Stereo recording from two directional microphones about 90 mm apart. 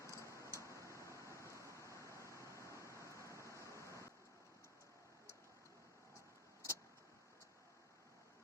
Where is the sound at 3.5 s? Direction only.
35° right (ahead or behind).